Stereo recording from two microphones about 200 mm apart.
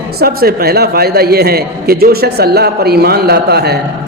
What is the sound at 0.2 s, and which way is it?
A man's voice, 50° right (ahead or behind).